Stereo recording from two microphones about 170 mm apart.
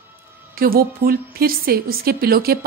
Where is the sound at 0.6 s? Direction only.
60° right (ahead or behind).